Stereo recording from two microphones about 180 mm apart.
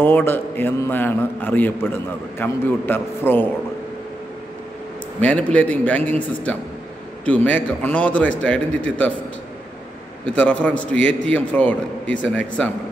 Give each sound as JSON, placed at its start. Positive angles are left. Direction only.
{"t": 0.0, "sound": "a man's voice", "side_deg": 10}
{"t": 5.2, "sound": "a man's voice", "side_deg": 5}
{"t": 10.2, "sound": "a man's voice", "side_deg": 10}